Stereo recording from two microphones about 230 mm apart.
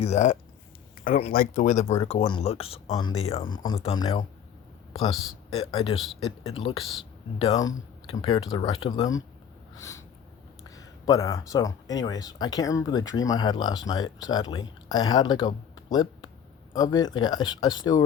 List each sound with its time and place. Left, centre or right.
0.0 s speech: left
5.1 s speech: centre
5.5 s speech: centre
10.6 s speech: centre